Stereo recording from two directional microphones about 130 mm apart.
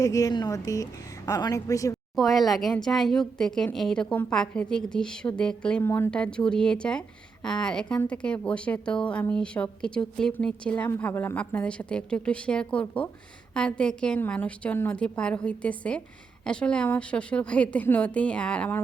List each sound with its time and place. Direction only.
0.0 s a woman's voice: 25° left (ahead or behind)
2.1 s a woman's voice: centre (ahead or behind)
5.8 s a woman's voice: 20° left (ahead or behind)